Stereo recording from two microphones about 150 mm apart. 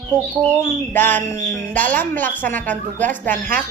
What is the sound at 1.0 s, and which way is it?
A woman's voice, 15° left (ahead or behind).